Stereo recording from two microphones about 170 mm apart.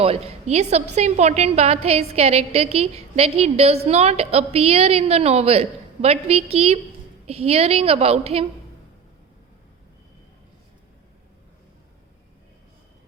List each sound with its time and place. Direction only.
0.0 s a woman's voice: 35° right (ahead or behind)